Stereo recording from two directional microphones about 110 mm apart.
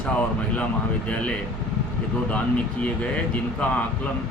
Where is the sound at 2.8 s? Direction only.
10° left (ahead or behind).